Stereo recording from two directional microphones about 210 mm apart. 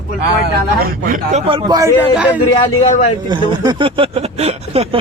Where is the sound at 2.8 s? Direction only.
35° left (ahead or behind).